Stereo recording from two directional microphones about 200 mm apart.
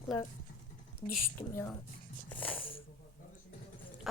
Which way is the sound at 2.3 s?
10° left (ahead or behind).